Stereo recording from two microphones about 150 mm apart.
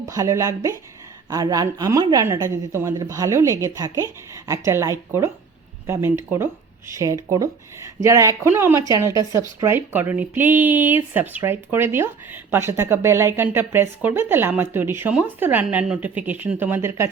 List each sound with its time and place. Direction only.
0.0 s a woman's voice: 20° right (ahead or behind)